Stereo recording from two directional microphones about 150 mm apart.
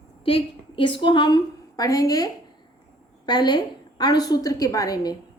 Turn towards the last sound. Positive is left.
turn(degrees=25)  # may be behind; listen again after turning